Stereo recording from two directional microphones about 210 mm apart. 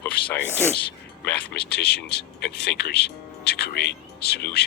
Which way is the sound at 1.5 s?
50° left (ahead or behind).